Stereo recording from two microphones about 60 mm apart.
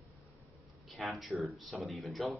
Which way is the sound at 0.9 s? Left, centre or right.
Centre.